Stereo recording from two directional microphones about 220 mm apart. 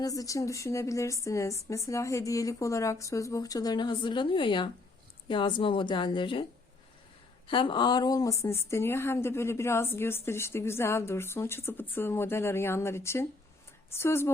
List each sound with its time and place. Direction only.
0.0 s a woman's voice: 15° left (ahead or behind)
7.4 s a woman's voice: 25° left (ahead or behind)